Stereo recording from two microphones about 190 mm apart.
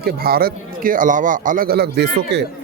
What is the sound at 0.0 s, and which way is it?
Speech, 50° right (ahead or behind).